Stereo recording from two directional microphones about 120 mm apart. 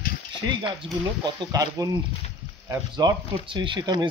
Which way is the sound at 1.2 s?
40° right (ahead or behind).